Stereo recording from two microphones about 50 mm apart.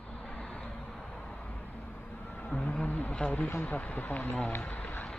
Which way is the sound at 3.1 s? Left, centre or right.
Left.